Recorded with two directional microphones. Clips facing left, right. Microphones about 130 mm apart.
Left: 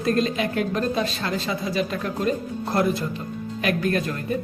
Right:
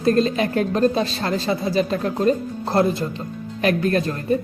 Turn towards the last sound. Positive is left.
turn(degrees=-35)  # may be behind; listen again after turning